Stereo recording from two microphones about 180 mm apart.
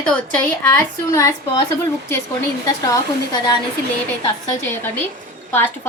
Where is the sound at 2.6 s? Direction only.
20° left (ahead or behind).